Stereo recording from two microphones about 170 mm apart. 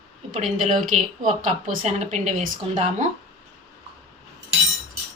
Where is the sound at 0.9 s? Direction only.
50° right (ahead or behind).